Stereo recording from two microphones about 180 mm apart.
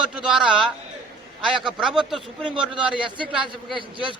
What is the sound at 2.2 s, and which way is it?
A man's voice, 30° right (ahead or behind).